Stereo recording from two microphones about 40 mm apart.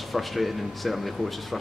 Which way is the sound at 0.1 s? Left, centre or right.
Centre.